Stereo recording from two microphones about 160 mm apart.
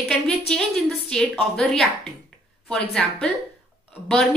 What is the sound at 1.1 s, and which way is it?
A woman's voice, centre (ahead or behind).